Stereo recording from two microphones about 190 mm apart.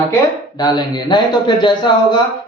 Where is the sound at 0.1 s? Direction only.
20° left (ahead or behind).